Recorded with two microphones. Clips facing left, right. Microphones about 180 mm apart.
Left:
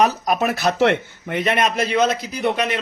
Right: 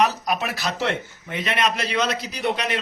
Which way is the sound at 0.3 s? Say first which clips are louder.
Left 6 dB; 45° left (ahead or behind).